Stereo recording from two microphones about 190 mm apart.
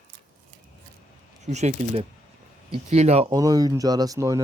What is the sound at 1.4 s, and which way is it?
Speech, 35° right (ahead or behind).